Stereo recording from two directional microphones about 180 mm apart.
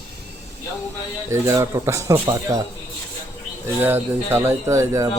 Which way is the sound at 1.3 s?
15° right (ahead or behind).